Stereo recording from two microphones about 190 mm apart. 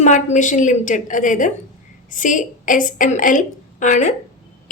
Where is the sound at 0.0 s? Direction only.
40° left (ahead or behind).